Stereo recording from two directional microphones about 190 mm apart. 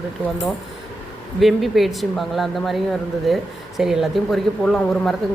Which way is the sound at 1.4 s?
Centre (ahead or behind).